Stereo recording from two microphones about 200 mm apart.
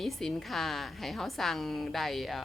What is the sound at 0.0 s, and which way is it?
A woman's voice, centre (ahead or behind).